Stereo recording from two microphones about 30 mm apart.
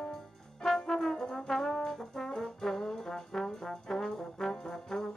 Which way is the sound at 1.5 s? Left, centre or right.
Centre.